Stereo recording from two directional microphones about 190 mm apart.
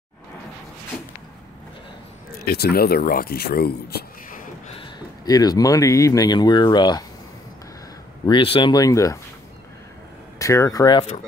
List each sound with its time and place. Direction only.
2.4 s speech: 55° left (ahead or behind)
4.7 s speech: 20° left (ahead or behind)
8.3 s speech: 25° left (ahead or behind)
10.4 s speech: 15° left (ahead or behind)